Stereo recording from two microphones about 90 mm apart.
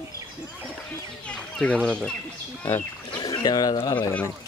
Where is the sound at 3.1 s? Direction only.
45° left (ahead or behind).